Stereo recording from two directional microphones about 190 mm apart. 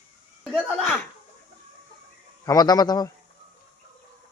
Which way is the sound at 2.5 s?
20° left (ahead or behind).